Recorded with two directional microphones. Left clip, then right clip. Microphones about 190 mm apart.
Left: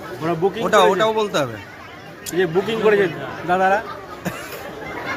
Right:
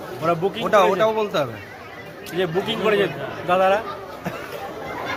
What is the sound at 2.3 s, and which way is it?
A man's voice, 5° left (ahead or behind).